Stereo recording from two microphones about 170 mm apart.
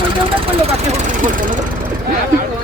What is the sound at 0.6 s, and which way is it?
Speech, 45° right (ahead or behind).